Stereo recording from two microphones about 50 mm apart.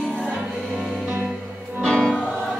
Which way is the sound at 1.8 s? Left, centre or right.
Centre.